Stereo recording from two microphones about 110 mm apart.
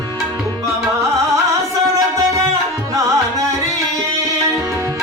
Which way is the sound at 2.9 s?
30° right (ahead or behind).